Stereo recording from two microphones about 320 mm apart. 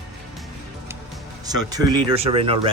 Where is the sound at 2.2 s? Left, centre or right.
Centre.